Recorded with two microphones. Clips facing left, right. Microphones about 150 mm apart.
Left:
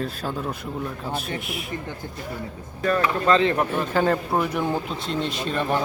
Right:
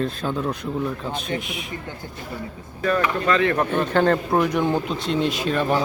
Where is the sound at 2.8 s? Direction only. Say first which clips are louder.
Right 1 dB; 35° left (ahead or behind).